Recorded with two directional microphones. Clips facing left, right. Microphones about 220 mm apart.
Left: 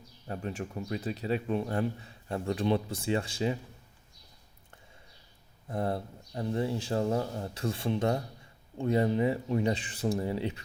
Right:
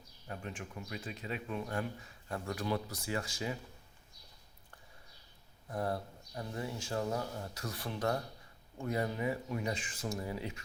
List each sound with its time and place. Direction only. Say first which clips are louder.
0.3 s speech: left 8 dB; 35° left (ahead or behind)
5.6 s speech: left 4 dB; 25° left (ahead or behind)